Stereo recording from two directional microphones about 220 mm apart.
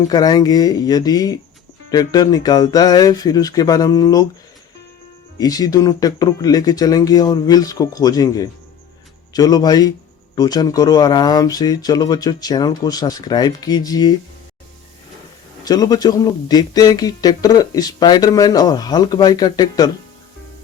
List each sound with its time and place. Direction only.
0.1 s speech: 15° left (ahead or behind)
5.4 s speech: 15° left (ahead or behind)
15.6 s speech: 15° left (ahead or behind)